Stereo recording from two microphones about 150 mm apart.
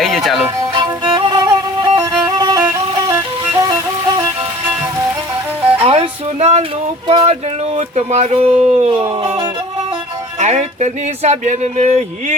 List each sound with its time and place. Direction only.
0.0 s music: centre (ahead or behind)
0.4 s music: 25° right (ahead or behind)
5.8 s music: 45° right (ahead or behind)
7.1 s speech: 35° right (ahead or behind)
7.8 s speech: 45° right (ahead or behind)
9.1 s music: 35° right (ahead or behind)
10.3 s speech: 45° right (ahead or behind)